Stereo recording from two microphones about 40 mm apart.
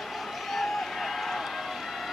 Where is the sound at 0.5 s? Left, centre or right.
Centre.